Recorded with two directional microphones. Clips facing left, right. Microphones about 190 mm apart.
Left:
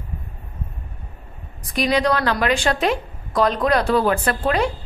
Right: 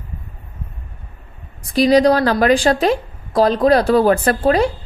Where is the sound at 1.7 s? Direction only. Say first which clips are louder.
Right 7 dB; 35° right (ahead or behind).